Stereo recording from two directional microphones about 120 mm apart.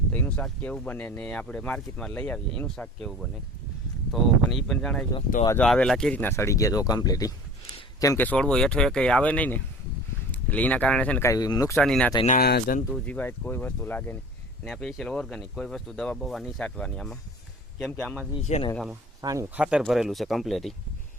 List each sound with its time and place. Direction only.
0.1 s speech: 15° left (ahead or behind); by 8.2 s 30° left (ahead or behind)
8.2 s speech: 10° left (ahead or behind)
11.2 s speech: 30° left (ahead or behind)
11.8 s speech: 5° left (ahead or behind)
12.2 s speech: 90° left
13.1 s speech: 15° left (ahead or behind)
18.3 s speech: 65° left (ahead or behind)
19.2 s speech: 30° right (ahead or behind)
19.5 s speech: 10° right (ahead or behind)